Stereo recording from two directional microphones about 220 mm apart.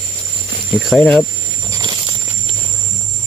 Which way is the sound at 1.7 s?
15° right (ahead or behind).